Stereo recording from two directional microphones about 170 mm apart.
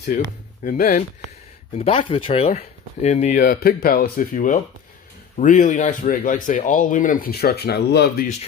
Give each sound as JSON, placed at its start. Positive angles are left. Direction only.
{"t": 0.7, "sound": "speech", "side_deg": 50}
{"t": 1.8, "sound": "speech", "side_deg": 35}
{"t": 3.5, "sound": "speech", "side_deg": 60}